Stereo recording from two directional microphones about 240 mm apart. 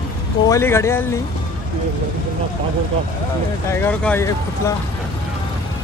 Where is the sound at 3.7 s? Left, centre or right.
Centre.